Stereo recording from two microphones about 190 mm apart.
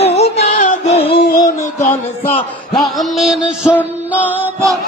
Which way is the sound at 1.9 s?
10° left (ahead or behind).